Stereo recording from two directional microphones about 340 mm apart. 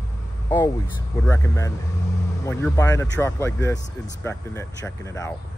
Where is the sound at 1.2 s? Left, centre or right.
Centre.